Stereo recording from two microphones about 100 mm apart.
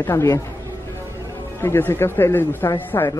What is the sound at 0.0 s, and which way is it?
Speech, 25° left (ahead or behind).